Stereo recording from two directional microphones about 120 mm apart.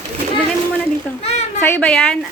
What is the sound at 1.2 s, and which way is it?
Speech, 65° left (ahead or behind).